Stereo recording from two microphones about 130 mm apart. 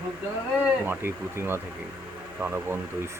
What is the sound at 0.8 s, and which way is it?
Speech, 15° right (ahead or behind).